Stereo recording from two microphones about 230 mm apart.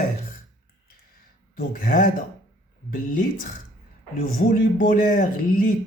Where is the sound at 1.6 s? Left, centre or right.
Left.